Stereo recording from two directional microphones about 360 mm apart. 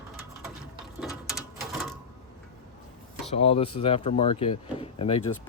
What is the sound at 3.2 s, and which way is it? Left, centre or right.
Speech, centre.